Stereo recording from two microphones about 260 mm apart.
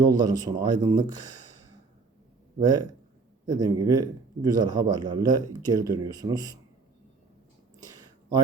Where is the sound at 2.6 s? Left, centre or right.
Centre.